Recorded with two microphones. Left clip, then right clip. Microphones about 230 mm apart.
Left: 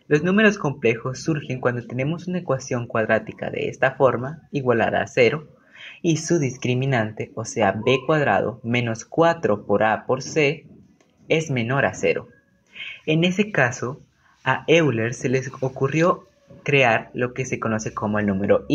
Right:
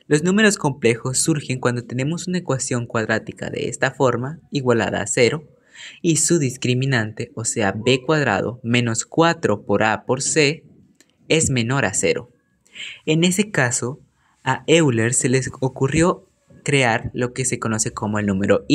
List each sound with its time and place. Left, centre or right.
0.1 s speech: right